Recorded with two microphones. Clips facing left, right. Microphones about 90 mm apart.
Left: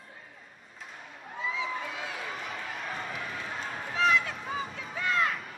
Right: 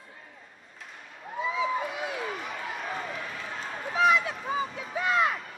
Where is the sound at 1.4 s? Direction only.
15° right (ahead or behind).